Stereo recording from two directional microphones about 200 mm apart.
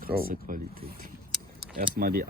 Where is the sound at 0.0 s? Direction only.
45° right (ahead or behind).